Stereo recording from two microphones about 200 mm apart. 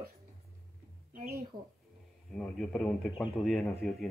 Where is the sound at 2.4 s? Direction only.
5° left (ahead or behind).